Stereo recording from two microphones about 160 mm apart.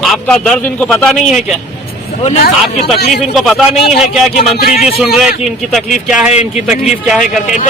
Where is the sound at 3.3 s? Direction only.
Centre (ahead or behind).